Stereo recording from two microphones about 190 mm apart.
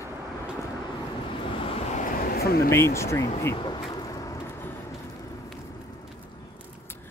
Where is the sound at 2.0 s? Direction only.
50° left (ahead or behind).